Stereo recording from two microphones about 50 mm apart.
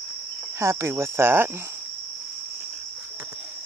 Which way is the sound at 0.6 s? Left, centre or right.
Right.